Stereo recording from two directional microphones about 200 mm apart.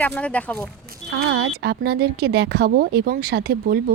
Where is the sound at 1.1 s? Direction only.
60° right (ahead or behind).